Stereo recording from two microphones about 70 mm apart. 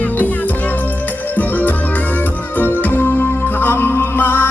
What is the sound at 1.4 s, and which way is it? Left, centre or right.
Music, left.